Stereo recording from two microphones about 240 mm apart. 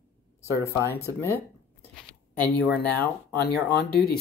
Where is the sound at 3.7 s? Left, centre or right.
Left.